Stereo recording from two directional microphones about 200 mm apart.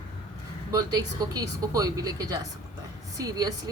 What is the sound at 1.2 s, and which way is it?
Speech, 15° right (ahead or behind).